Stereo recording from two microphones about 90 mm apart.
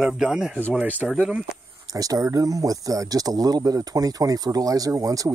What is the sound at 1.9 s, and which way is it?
Speech, 40° right (ahead or behind).